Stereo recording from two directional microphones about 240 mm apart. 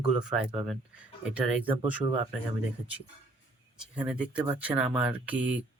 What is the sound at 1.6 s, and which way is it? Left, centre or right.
Speech, right.